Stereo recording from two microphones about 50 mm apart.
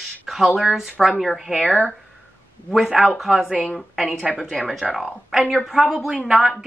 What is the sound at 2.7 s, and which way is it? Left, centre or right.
Speech, centre.